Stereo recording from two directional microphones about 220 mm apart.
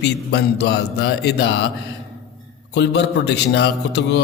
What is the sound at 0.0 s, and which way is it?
Speech, 50° left (ahead or behind).